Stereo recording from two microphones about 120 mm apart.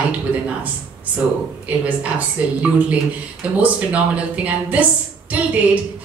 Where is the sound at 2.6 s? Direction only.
10° right (ahead or behind).